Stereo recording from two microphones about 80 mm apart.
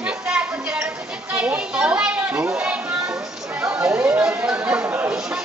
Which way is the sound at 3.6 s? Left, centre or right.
Right.